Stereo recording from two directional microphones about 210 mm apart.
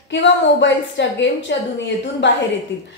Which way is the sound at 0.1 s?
60° left (ahead or behind).